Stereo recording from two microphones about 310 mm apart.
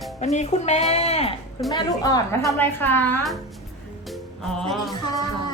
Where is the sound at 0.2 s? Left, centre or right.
Left; by 3.3 s centre.